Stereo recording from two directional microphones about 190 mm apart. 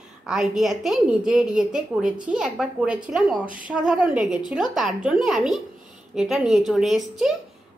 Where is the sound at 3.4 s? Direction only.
45° right (ahead or behind).